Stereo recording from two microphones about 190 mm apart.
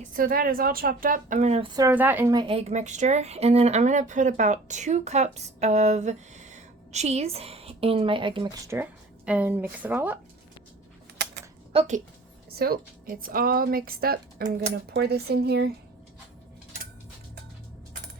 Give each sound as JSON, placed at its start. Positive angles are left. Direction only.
{"t": 0.0, "sound": "a woman's voice", "side_deg": -45}
{"t": 1.7, "sound": "speech", "side_deg": -15}
{"t": 2.3, "sound": "speech", "side_deg": -25}
{"t": 8.7, "sound": "speech", "side_deg": -10}
{"t": 11.7, "sound": "a woman's voice", "side_deg": -30}
{"t": 12.5, "sound": "a woman's voice", "side_deg": -55}